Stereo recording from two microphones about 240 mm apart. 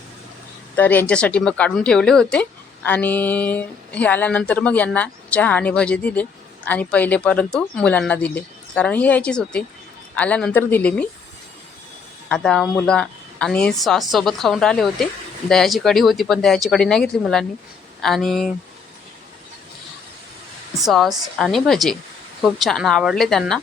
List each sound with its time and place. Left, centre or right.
0.8 s speech: centre
12.3 s speech: centre
20.8 s speech: centre